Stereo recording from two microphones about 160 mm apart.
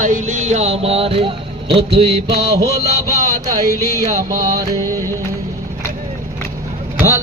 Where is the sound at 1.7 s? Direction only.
35° right (ahead or behind).